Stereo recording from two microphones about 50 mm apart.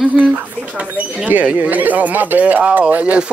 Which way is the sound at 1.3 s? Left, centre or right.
Right.